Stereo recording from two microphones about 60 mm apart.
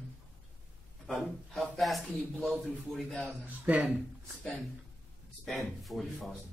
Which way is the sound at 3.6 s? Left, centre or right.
Right.